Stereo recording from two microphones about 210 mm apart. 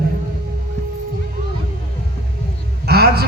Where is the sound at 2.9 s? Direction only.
50° right (ahead or behind).